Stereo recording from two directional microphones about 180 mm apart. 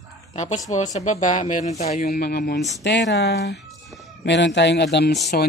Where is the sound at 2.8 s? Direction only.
75° left (ahead or behind).